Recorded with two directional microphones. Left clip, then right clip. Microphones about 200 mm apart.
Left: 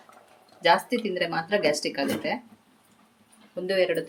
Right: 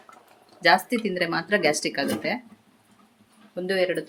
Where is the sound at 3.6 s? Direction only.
10° right (ahead or behind).